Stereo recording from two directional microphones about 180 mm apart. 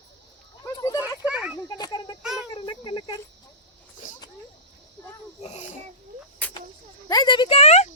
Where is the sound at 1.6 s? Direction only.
20° left (ahead or behind).